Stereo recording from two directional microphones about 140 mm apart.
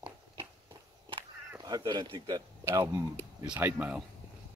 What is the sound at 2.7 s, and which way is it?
Speech, 20° right (ahead or behind).